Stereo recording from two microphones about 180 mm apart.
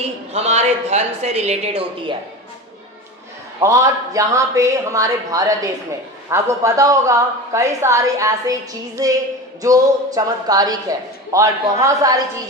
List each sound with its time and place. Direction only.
0.3 s a woman's voice: 40° right (ahead or behind)
3.6 s a woman's voice: 15° right (ahead or behind)